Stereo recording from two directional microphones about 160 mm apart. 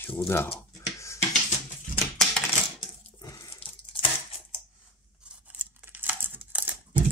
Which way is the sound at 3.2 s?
20° left (ahead or behind).